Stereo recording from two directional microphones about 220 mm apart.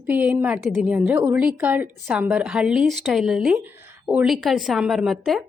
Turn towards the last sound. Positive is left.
turn(degrees=0)  # may be behind; listen again after turning